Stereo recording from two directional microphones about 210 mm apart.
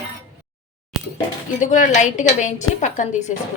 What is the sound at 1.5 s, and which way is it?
A woman's voice, 35° left (ahead or behind).